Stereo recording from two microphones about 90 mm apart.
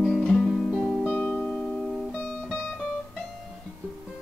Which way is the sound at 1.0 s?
15° left (ahead or behind).